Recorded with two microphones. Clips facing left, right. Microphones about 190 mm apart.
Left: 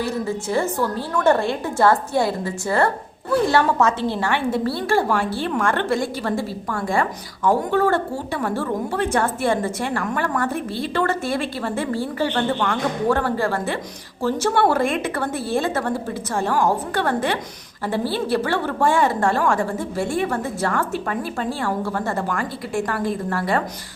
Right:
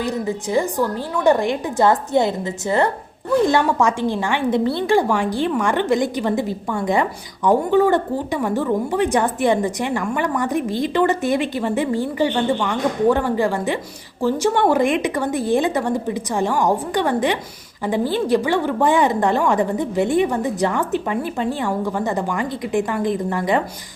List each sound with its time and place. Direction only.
0.0 s a woman's voice: 15° right (ahead or behind)